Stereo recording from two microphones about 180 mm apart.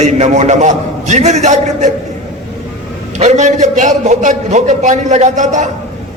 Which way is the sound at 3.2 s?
40° right (ahead or behind).